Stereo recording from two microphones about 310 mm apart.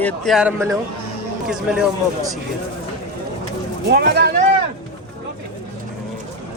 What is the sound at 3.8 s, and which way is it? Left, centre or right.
Speech, right.